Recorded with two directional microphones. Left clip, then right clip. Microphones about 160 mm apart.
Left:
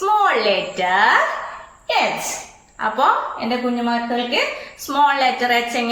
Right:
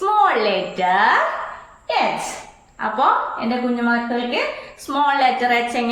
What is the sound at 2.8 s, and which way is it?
A woman's voice, 10° right (ahead or behind).